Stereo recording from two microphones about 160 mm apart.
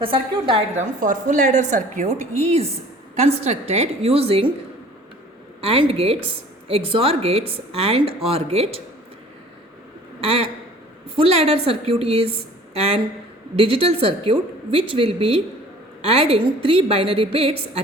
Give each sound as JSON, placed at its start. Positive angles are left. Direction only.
{"t": 0.0, "sound": "speech", "side_deg": -35}
{"t": 0.8, "sound": "a woman's voice", "side_deg": -55}
{"t": 5.5, "sound": "a woman's voice", "side_deg": -35}
{"t": 10.2, "sound": "speech", "side_deg": -40}
{"t": 13.6, "sound": "speech", "side_deg": -35}